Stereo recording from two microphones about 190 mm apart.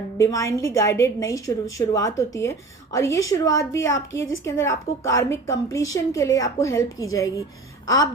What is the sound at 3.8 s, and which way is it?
A woman's voice, 90° left.